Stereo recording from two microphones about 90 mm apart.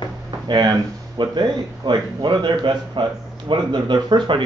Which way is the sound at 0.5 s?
55° right (ahead or behind).